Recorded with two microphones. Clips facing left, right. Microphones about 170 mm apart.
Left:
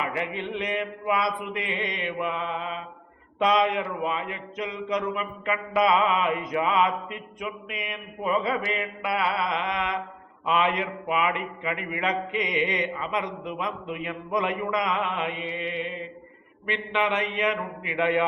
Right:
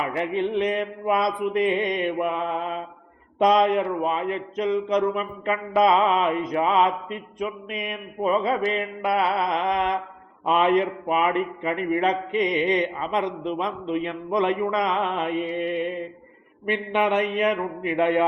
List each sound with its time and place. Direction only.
0.1 s mantra: 40° right (ahead or behind)
1.5 s a man's voice: 45° right (ahead or behind)
3.4 s mantra: 45° right (ahead or behind)
16.6 s a man's voice: 50° right (ahead or behind)